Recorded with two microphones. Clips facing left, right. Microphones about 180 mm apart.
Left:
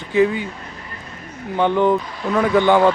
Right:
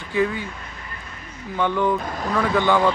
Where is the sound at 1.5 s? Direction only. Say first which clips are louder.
Left 5 dB; 20° left (ahead or behind).